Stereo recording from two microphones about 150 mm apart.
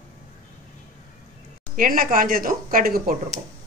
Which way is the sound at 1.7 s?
65° right (ahead or behind).